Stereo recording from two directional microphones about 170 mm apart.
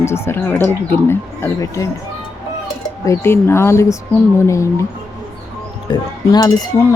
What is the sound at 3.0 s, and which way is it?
Speech, 15° left (ahead or behind).